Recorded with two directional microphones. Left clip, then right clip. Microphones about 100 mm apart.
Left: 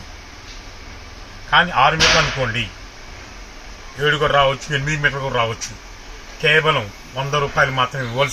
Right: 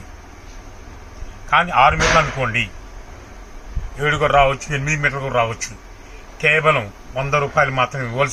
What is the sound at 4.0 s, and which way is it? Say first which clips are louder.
Speech: right 1 dB; 30° right (ahead or behind).